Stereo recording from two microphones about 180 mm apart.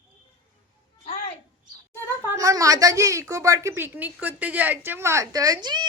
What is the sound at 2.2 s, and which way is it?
A woman's voice, 20° right (ahead or behind).